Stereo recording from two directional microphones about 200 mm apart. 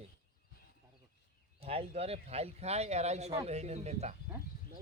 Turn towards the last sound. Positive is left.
turn(degrees=-35)  # may be behind; listen again after turning